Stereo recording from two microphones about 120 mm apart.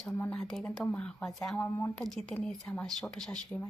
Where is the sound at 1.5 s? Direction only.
20° left (ahead or behind).